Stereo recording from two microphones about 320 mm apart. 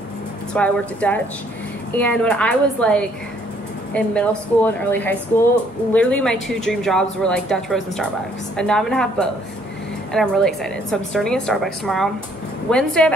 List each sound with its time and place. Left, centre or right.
0.5 s speech: centre